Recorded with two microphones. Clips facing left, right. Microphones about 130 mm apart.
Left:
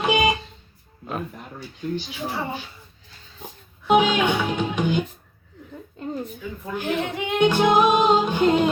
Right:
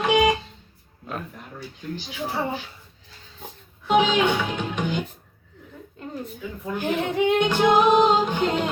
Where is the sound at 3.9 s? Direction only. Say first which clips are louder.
Left 1 dB; 15° left (ahead or behind).